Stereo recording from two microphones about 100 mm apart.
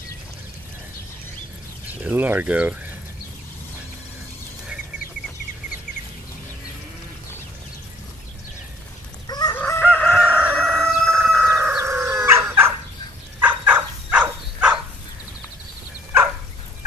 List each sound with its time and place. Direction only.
1.9 s speech: 15° right (ahead or behind)
9.5 s chicken: 20° left (ahead or behind)
9.8 s chicken: 5° right (ahead or behind)
10.3 s crowing: 15° right (ahead or behind)
11.4 s chicken: 30° right (ahead or behind)
13.4 s a sound: 15° right (ahead or behind)